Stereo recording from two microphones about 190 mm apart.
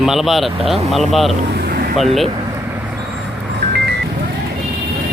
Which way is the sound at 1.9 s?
Centre (ahead or behind).